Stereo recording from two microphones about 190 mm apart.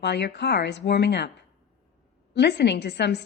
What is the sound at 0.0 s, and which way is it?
A woman's voice, 65° left (ahead or behind).